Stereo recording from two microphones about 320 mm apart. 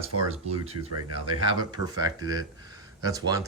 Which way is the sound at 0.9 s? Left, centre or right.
Right.